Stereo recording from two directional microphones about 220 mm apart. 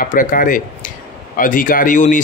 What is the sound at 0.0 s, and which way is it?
Speech, 40° left (ahead or behind).